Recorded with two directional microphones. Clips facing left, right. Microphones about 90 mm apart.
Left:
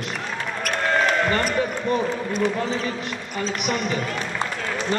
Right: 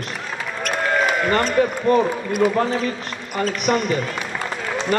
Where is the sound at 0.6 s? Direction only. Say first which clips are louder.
Right 1 dB; 5° right (ahead or behind).